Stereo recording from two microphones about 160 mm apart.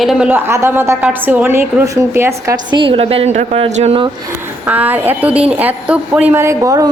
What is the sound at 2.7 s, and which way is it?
A woman's voice, 35° right (ahead or behind).